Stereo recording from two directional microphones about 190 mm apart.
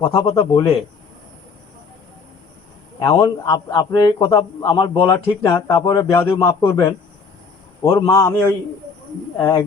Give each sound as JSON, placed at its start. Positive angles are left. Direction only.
{"t": 0.0, "sound": "a man's voice", "side_deg": 20}
{"t": 3.0, "sound": "a man's voice", "side_deg": 15}